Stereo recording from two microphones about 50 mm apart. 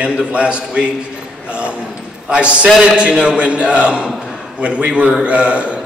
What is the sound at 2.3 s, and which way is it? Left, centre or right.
A man's voice, right.